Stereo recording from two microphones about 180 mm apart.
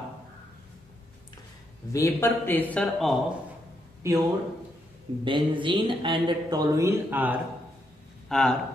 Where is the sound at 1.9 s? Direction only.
15° left (ahead or behind).